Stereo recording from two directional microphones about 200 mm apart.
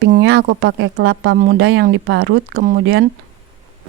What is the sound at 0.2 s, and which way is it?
A woman's voice, 60° right (ahead or behind).